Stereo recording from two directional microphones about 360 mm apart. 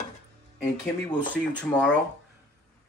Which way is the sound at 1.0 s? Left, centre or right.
Centre.